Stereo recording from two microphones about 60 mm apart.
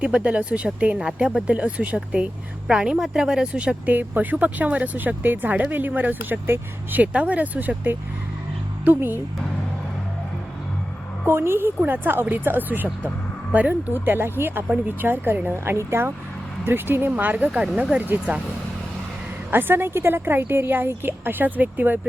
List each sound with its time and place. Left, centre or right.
0.0 s a woman's voice: centre
3.8 s a woman's voice: right
11.3 s a woman's voice: right
17.1 s speech: right
18.0 s a woman's voice: right
19.5 s a woman's voice: right